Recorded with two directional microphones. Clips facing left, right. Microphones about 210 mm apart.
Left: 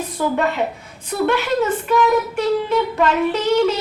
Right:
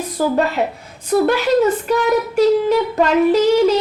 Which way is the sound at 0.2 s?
35° right (ahead or behind).